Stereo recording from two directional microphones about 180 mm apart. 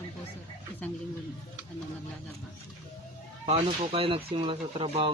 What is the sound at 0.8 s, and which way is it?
Speech, 10° left (ahead or behind).